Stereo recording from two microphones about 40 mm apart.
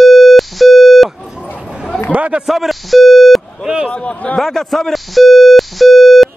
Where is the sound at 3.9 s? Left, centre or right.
Left.